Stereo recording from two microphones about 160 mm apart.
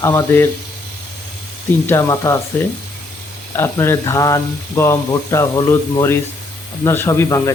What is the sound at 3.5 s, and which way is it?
Speech, 15° left (ahead or behind).